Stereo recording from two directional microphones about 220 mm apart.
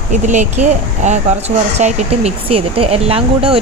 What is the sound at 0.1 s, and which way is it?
Speech, 35° right (ahead or behind).